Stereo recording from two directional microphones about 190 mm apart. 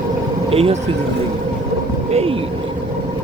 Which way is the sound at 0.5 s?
30° right (ahead or behind).